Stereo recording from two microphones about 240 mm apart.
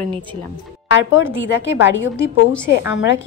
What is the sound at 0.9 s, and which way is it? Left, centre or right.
A woman's voice, left.